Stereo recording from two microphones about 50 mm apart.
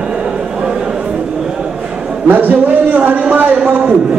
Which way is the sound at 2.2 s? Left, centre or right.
Right.